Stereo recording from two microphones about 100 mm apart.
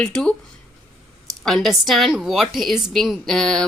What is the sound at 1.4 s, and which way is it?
A woman's voice, 5° left (ahead or behind).